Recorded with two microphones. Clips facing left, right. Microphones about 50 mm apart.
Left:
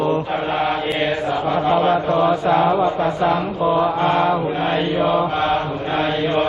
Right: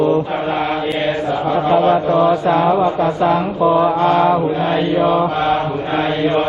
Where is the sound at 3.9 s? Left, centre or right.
Left.